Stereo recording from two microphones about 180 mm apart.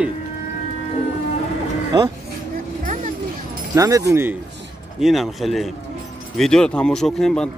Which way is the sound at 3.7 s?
20° right (ahead or behind).